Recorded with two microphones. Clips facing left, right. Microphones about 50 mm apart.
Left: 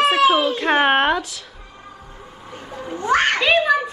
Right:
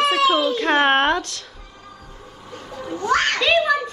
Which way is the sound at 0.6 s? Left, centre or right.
Centre.